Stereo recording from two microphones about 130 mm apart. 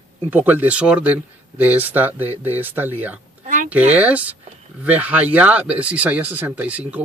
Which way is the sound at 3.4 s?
75° right (ahead or behind).